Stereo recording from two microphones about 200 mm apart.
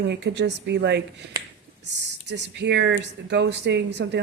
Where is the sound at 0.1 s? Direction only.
55° right (ahead or behind).